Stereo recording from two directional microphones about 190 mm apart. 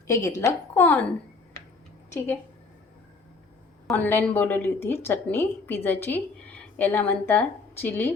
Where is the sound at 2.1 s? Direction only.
15° left (ahead or behind).